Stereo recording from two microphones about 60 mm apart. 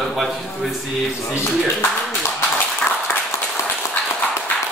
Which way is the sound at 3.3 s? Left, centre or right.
Left.